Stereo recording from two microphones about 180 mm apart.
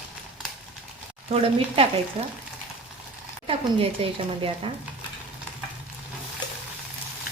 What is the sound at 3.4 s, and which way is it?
A woman's voice, 30° right (ahead or behind).